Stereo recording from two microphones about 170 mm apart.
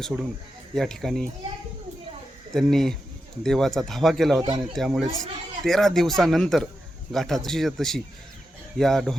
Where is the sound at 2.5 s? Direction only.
Centre (ahead or behind).